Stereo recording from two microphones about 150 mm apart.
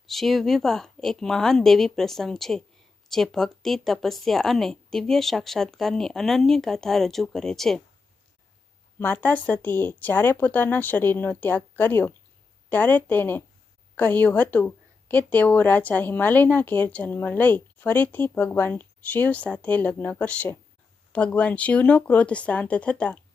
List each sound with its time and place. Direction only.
0.0 s speech: centre (ahead or behind)
9.0 s a woman's voice: 10° left (ahead or behind)